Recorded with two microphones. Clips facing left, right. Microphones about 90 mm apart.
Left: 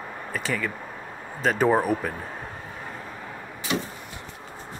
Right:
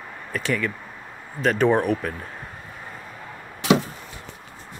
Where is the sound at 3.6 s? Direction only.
90° right.